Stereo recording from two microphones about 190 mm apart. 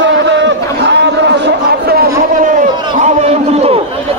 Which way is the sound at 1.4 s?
55° right (ahead or behind).